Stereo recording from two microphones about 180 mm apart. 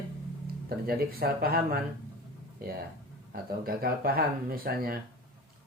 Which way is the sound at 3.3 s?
55° right (ahead or behind).